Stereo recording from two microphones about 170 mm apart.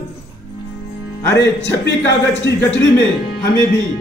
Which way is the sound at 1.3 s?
90° left.